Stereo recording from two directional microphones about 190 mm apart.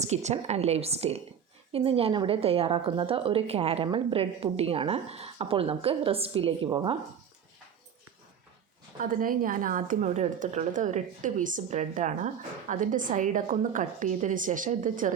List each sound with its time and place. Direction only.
0.0 s a woman's voice: 35° right (ahead or behind)
9.0 s a woman's voice: 45° right (ahead or behind)